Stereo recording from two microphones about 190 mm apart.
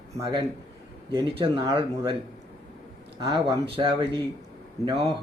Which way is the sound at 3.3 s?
30° right (ahead or behind).